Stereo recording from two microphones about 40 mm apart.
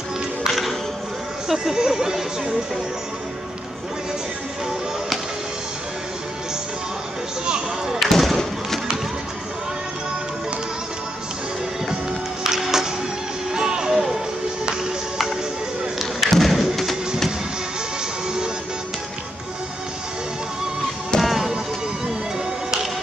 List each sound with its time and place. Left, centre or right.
0.5 s music: centre
1.5 s speech: centre
7.4 s speech: centre
8.0 s basketball bounce: centre
8.4 s thump: centre
12.4 s music: centre
16.0 s thump: centre
21.2 s music: centre